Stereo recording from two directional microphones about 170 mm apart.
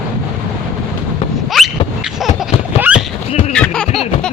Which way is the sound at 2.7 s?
35° left (ahead or behind).